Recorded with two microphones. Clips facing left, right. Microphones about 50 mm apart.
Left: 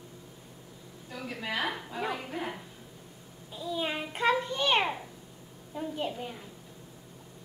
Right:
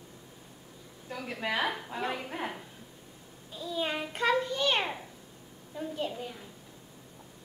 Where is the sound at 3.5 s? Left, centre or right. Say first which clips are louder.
Even; centre.